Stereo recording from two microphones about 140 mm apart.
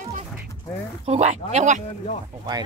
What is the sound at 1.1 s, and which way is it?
Speech, 50° right (ahead or behind).